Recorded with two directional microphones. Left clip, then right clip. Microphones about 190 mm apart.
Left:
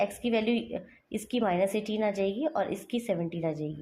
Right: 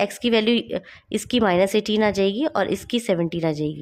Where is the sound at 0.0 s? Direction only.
45° right (ahead or behind).